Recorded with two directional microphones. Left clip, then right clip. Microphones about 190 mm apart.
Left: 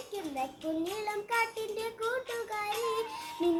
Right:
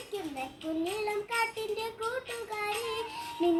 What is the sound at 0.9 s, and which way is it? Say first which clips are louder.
Child singing: right 1 dB; 20° left (ahead or behind).